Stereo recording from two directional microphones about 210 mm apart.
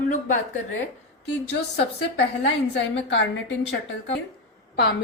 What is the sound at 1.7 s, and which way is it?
A woman's voice, 50° left (ahead or behind).